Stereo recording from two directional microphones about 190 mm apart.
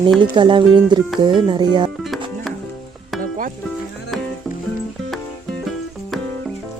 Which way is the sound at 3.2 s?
45° right (ahead or behind).